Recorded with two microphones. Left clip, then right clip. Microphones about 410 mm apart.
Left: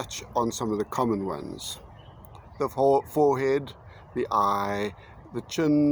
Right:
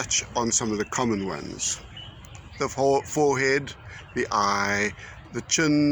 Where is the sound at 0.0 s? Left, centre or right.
Left.